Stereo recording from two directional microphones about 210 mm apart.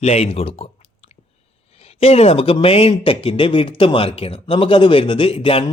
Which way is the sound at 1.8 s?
30° left (ahead or behind).